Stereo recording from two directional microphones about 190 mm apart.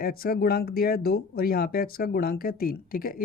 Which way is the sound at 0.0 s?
50° left (ahead or behind).